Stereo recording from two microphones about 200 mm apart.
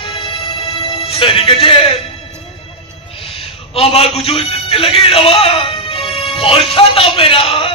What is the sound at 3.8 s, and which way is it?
Speech, 30° left (ahead or behind).